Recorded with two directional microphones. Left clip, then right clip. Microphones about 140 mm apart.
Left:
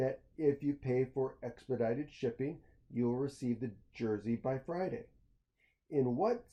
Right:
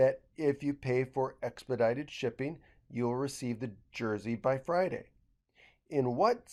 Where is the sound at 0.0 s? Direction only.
20° right (ahead or behind).